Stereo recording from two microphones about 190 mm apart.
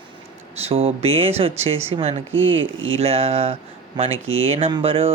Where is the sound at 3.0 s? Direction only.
30° right (ahead or behind).